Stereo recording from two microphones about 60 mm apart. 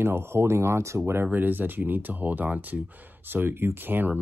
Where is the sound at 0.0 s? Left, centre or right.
Right.